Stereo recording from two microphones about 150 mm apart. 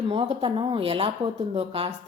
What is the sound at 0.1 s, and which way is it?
Speech, 35° right (ahead or behind).